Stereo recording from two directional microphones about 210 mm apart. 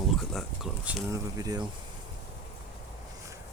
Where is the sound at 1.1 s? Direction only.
15° right (ahead or behind).